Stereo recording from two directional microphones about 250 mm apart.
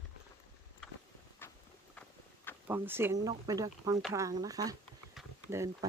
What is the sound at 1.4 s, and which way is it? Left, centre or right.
Walk, centre.